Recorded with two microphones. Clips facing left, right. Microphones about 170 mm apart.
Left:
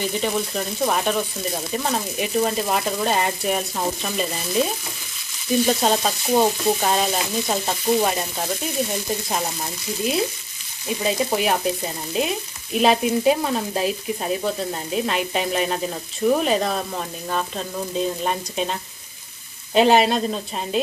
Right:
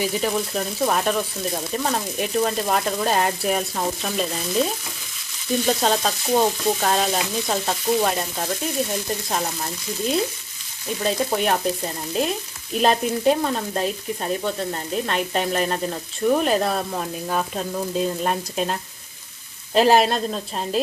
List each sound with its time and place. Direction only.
0.0 s frying: 5° right (ahead or behind)
5.7 s frying: 5° left (ahead or behind)
11.0 s frying: 5° left (ahead or behind)